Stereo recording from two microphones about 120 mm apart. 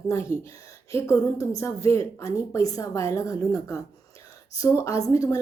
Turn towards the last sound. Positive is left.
turn(degrees=25)  # may be behind; listen again after turning